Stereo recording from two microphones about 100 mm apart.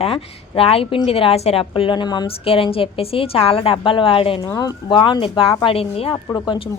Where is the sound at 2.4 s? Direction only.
70° left (ahead or behind).